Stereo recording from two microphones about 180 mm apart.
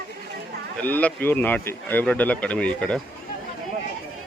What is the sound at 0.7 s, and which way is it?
Speech, 10° left (ahead or behind).